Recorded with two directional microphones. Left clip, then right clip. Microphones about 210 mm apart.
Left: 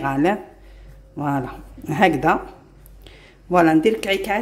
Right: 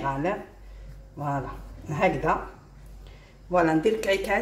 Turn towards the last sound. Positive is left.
turn(degrees=35)  # may be behind; listen again after turning